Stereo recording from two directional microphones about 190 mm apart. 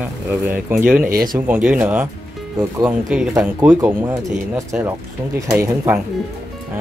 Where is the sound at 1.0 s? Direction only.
45° right (ahead or behind).